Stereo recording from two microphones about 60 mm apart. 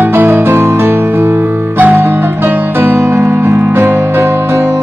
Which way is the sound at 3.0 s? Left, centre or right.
Right.